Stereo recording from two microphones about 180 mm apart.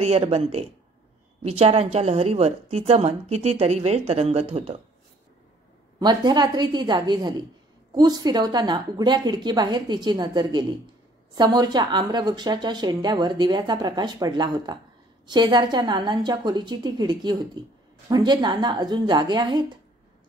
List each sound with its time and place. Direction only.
0.0 s a woman's voice: 35° right (ahead or behind)
5.9 s a woman's voice: 25° right (ahead or behind)